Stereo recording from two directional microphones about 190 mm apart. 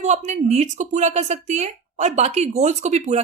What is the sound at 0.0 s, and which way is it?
A woman's voice, 35° right (ahead or behind).